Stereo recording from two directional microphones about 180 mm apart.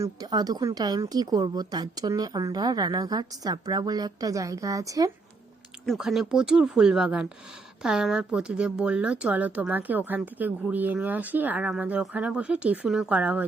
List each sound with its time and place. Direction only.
0.0 s speech: 25° right (ahead or behind)
5.8 s speech: centre (ahead or behind)